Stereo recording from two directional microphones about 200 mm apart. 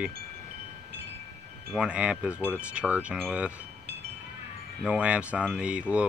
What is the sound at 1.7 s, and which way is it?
Speech, 5° right (ahead or behind).